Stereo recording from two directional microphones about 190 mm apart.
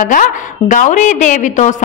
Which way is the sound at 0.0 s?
45° left (ahead or behind).